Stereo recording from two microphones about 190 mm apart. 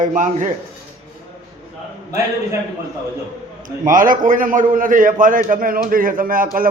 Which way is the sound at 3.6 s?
45° right (ahead or behind).